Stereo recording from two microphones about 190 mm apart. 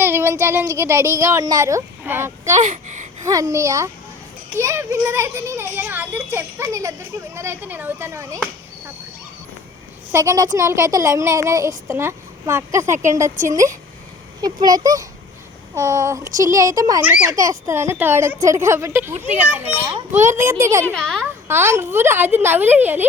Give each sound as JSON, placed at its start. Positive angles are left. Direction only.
{"t": 0.0, "sound": "speech", "side_deg": -10}
{"t": 2.6, "sound": "speech", "side_deg": -40}
{"t": 3.2, "sound": "speech", "side_deg": -15}
{"t": 10.1, "sound": "speech", "side_deg": -15}
{"t": 20.3, "sound": "speech", "side_deg": -15}
{"t": 20.9, "sound": "a woman's voice", "side_deg": 5}
{"t": 21.4, "sound": "speech", "side_deg": -15}